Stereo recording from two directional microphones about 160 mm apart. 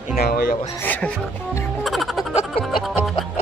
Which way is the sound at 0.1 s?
75° left (ahead or behind).